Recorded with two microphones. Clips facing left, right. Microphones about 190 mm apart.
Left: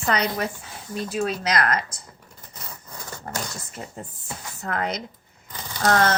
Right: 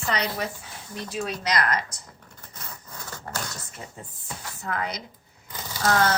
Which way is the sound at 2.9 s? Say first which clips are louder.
Left 2 dB; 15° left (ahead or behind).